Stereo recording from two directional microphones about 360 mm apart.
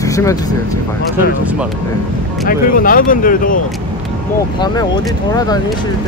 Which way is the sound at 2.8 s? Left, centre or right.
Left.